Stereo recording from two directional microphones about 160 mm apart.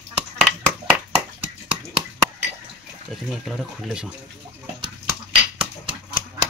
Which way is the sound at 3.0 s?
Centre (ahead or behind).